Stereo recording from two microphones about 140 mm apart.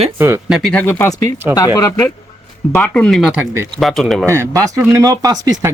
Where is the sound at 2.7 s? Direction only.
10° left (ahead or behind).